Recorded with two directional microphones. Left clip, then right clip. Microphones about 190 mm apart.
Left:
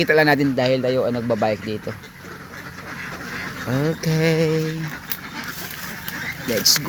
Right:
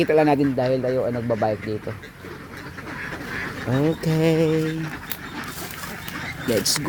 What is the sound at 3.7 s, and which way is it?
Speech, 10° right (ahead or behind).